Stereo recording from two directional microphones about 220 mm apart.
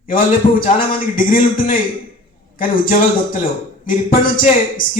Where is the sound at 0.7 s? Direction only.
40° left (ahead or behind).